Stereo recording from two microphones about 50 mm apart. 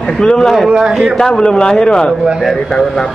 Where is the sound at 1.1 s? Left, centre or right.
Centre.